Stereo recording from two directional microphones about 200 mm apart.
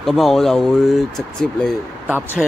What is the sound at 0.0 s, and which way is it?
Speech, centre (ahead or behind).